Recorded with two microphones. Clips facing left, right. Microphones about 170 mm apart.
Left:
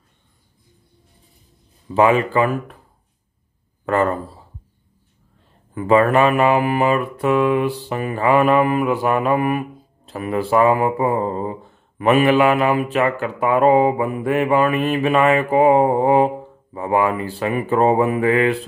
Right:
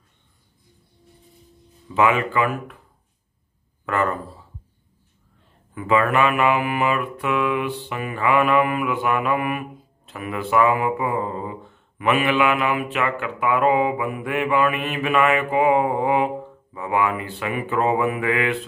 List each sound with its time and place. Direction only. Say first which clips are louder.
2.0 s mantra: left 4 dB; 35° left (ahead or behind)
3.8 s mantra: left 5 dB; 35° left (ahead or behind)
5.8 s mantra: left 5 dB; 35° left (ahead or behind)